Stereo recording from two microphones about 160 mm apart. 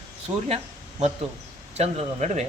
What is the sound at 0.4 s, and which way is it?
Speech, 40° right (ahead or behind).